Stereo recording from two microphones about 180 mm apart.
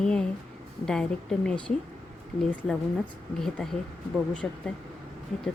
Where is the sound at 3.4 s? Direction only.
5° left (ahead or behind).